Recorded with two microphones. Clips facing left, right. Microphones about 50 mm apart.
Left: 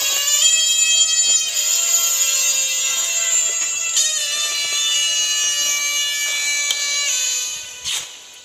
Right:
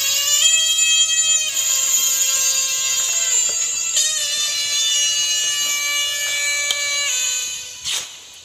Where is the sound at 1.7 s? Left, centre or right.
Right.